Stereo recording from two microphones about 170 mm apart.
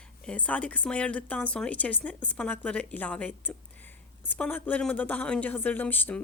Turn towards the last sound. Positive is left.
turn(degrees=10)  # may be behind; listen again after turning